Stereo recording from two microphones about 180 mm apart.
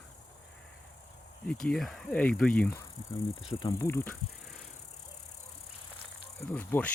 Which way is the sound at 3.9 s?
15° left (ahead or behind).